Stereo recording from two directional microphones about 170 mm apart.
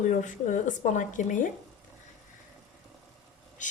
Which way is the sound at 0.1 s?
45° left (ahead or behind).